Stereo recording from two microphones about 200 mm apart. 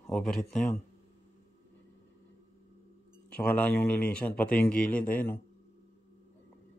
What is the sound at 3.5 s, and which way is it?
Speech, 5° left (ahead or behind).